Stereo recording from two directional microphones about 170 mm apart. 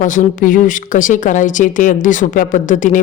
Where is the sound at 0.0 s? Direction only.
50° left (ahead or behind).